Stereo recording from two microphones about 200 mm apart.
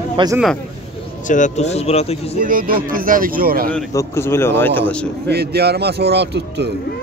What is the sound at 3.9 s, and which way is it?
A man's voice, 15° left (ahead or behind).